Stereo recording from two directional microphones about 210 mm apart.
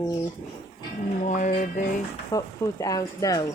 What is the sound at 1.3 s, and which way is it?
Music, 40° left (ahead or behind).